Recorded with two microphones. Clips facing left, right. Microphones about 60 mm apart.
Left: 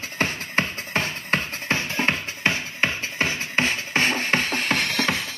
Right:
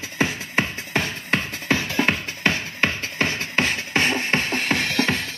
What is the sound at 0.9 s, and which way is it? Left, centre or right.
Music, left.